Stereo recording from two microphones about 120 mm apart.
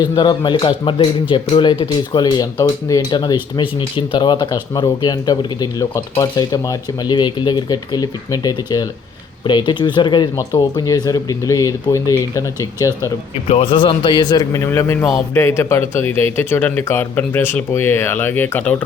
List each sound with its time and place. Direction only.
0.2 s speech: 40° left (ahead or behind)
13.5 s a man's voice: 45° left (ahead or behind); by 18.8 s 15° left (ahead or behind)